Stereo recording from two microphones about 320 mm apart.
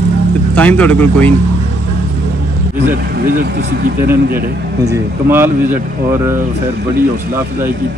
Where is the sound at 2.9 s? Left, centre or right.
Right.